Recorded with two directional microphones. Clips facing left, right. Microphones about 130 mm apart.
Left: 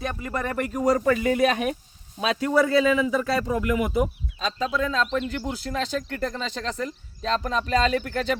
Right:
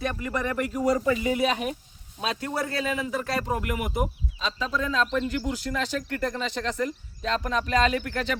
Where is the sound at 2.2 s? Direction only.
90° left.